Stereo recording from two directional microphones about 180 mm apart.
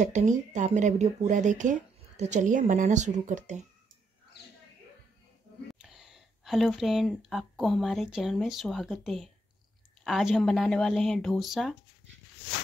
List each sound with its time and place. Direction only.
0.0 s speech: 40° right (ahead or behind)
5.8 s speech: centre (ahead or behind)